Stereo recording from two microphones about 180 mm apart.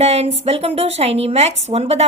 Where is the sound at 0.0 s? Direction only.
35° right (ahead or behind).